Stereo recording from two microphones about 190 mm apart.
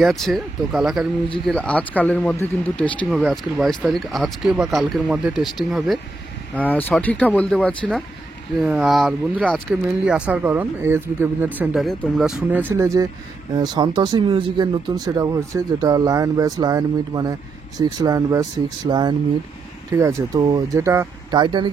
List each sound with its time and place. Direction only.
0.0 s speech: centre (ahead or behind); by 21.6 s 25° right (ahead or behind)